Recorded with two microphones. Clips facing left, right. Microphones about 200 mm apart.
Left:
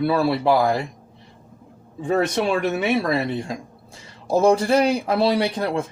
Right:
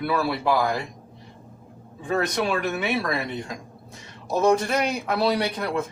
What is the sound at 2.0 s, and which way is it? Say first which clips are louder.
A man's voice: left 4 dB; 30° left (ahead or behind).